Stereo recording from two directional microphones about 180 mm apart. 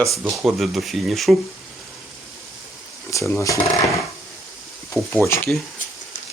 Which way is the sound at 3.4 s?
15° left (ahead or behind).